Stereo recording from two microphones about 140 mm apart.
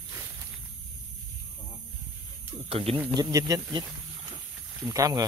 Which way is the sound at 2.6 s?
45° right (ahead or behind).